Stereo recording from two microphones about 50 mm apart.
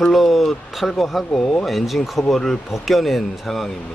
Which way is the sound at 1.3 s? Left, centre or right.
Centre.